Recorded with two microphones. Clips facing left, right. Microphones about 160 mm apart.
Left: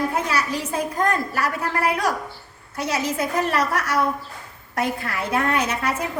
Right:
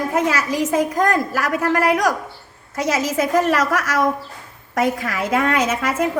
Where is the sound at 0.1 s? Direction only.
90° right.